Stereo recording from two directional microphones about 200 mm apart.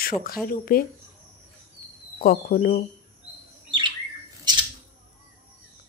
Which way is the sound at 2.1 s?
45° left (ahead or behind).